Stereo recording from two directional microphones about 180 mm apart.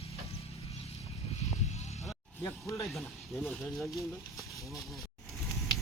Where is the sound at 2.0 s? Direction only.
15° left (ahead or behind).